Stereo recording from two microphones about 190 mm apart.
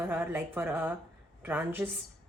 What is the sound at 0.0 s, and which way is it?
A woman's voice, 10° right (ahead or behind).